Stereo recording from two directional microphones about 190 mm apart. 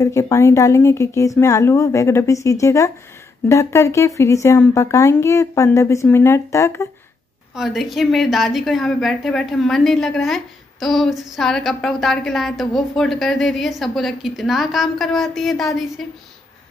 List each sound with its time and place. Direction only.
0.0 s speech: 15° left (ahead or behind)
7.5 s a woman's voice: centre (ahead or behind)